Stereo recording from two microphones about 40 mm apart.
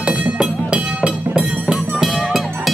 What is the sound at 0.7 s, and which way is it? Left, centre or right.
Music, right.